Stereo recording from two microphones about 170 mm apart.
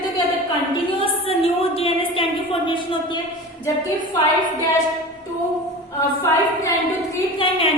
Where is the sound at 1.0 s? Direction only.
35° left (ahead or behind).